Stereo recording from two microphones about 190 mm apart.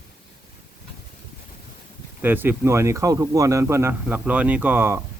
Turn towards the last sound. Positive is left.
turn(degrees=-15)  # may be behind; listen again after turning